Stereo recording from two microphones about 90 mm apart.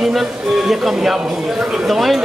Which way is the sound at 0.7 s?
5° right (ahead or behind).